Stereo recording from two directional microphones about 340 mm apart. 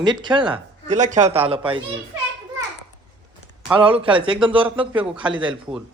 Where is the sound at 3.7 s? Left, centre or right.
Centre.